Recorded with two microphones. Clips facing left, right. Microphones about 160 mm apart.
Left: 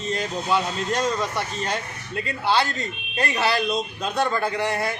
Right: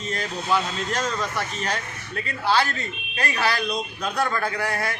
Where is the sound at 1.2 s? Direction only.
20° left (ahead or behind).